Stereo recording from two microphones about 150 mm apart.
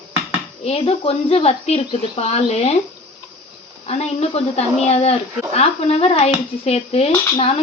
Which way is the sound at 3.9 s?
45° left (ahead or behind).